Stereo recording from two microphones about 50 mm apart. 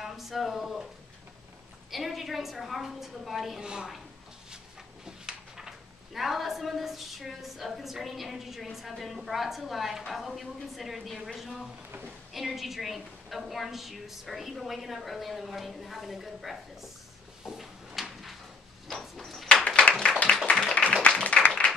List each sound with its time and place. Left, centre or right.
0.0 s speech: centre
1.9 s speech: centre
3.6 s a woman's voice: centre
5.0 s speech: centre
12.4 s speech: centre
17.5 s drawer open or close: centre
18.9 s sliding door: centre
19.4 s a sound: left
20.6 s music: left